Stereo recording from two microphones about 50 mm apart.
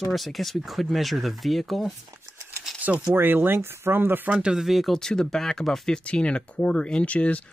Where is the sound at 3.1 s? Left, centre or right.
Right.